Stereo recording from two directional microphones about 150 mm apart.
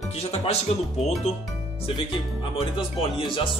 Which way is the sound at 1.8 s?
35° left (ahead or behind).